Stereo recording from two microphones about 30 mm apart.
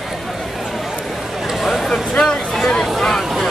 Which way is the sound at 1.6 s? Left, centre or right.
Centre.